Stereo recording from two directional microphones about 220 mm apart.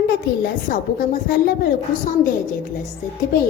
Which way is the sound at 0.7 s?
40° left (ahead or behind).